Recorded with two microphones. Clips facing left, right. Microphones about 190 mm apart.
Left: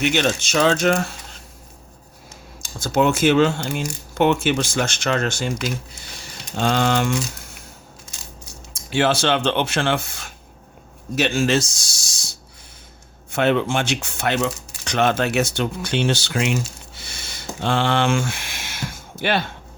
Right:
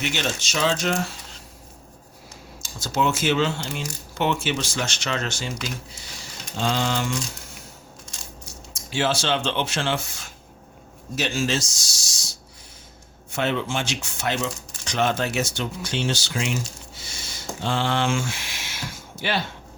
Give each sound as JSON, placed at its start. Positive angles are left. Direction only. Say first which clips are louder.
{"t": 0.0, "sound": "speech", "louder": "left 7 dB", "side_deg": 60}
{"t": 2.6, "sound": "speech", "louder": "left 6 dB", "side_deg": 55}
{"t": 6.6, "sound": "speech", "louder": "left 5 dB", "side_deg": 60}
{"t": 8.7, "sound": "speech", "louder": "left 5 dB", "side_deg": 60}
{"t": 13.3, "sound": "speech", "louder": "left 6 dB", "side_deg": 60}
{"t": 16.9, "sound": "a sound", "louder": "left 1 dB", "side_deg": 60}